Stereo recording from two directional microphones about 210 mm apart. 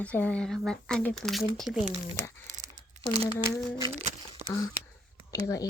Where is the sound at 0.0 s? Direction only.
5° left (ahead or behind).